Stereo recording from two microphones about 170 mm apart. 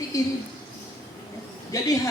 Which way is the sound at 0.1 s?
20° left (ahead or behind).